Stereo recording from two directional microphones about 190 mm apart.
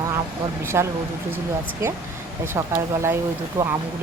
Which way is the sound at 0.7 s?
15° right (ahead or behind).